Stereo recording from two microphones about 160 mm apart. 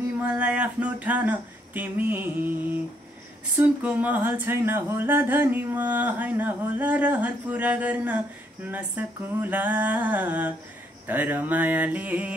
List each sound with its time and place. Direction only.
0.2 s speech: 5° right (ahead or behind)
3.5 s speech: 10° right (ahead or behind)